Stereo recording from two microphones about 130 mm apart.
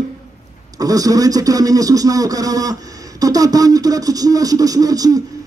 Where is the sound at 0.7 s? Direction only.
30° right (ahead or behind).